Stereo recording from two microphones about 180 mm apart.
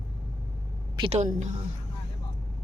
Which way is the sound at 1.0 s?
40° right (ahead or behind).